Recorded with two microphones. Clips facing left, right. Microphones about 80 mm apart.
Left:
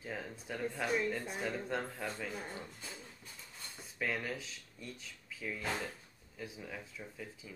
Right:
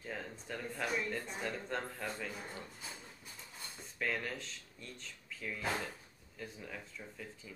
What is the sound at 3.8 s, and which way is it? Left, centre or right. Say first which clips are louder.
Speech: even; centre.